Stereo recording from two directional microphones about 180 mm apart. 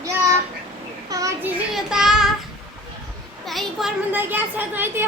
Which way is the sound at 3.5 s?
Centre (ahead or behind).